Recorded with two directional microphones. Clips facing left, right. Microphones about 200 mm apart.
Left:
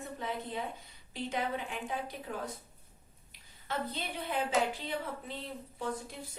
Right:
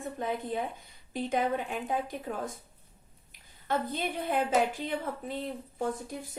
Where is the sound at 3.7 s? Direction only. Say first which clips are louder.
Right 6 dB; 50° right (ahead or behind).